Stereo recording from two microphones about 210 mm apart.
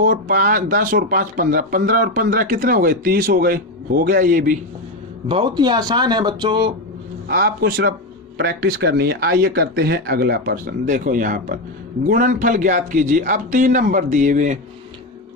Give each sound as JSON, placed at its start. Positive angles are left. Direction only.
{"t": 0.0, "sound": "speech", "side_deg": -45}
{"t": 5.3, "sound": "speech", "side_deg": -20}
{"t": 7.3, "sound": "speech", "side_deg": -45}